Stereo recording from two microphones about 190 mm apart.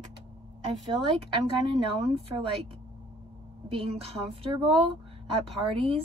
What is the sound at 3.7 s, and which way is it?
Speech, 30° right (ahead or behind).